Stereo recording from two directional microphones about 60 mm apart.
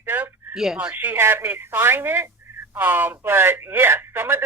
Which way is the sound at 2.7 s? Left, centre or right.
Right.